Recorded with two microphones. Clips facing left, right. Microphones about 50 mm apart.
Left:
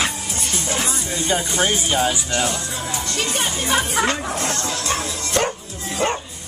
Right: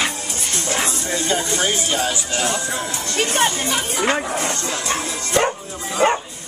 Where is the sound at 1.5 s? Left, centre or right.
Centre.